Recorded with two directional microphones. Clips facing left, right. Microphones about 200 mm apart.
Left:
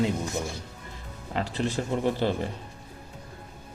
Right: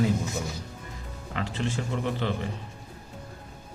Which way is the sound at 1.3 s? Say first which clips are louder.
Left 2 dB; 35° left (ahead or behind).